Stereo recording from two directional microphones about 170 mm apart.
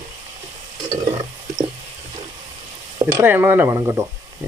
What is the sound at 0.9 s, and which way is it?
Stir, 40° right (ahead or behind).